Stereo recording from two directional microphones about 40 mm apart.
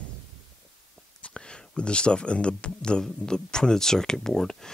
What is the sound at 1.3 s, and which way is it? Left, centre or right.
Speech, left.